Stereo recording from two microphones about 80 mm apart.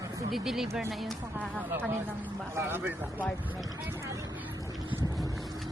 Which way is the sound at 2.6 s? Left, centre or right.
Right.